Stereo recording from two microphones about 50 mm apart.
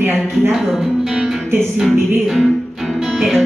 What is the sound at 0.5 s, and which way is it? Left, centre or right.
Music, centre.